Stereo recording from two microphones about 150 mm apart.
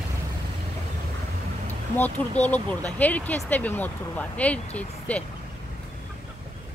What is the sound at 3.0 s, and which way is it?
Speech, 10° left (ahead or behind).